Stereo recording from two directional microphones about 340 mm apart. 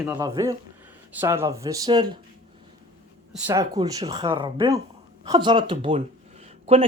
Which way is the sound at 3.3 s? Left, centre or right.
Centre.